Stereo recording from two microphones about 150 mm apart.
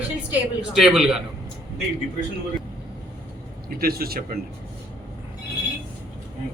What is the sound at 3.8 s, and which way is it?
Speech, 90° right.